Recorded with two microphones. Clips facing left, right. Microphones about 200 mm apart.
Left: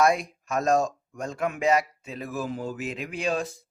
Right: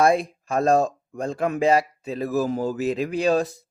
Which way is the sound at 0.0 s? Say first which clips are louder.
Right 3 dB; 30° right (ahead or behind).